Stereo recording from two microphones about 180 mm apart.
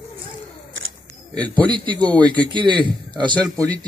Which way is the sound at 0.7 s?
90° right.